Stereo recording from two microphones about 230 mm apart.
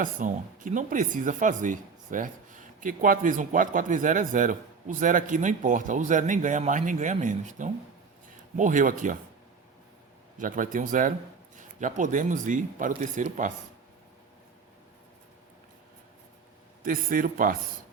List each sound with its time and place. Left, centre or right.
0.0 s speech: right
10.3 s speech: right
16.8 s speech: right